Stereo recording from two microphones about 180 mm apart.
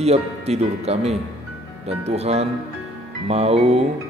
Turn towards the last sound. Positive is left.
turn(degrees=-35)  # may be behind; listen again after turning